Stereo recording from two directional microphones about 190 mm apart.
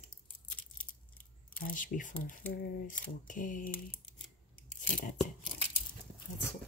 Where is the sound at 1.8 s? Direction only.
45° left (ahead or behind).